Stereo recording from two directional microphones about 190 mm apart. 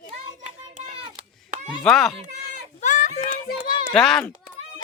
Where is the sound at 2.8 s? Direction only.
40° left (ahead or behind).